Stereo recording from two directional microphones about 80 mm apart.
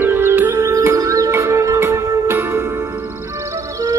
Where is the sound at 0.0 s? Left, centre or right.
Right.